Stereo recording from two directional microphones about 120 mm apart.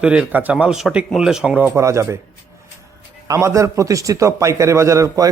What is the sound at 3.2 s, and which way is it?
A man's voice, 25° right (ahead or behind).